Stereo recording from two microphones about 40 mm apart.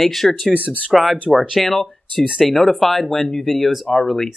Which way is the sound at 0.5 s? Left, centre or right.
Right.